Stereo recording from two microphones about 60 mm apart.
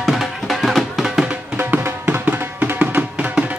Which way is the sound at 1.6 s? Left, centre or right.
Right.